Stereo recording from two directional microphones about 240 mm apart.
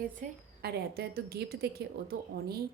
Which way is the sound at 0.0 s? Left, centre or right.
Right.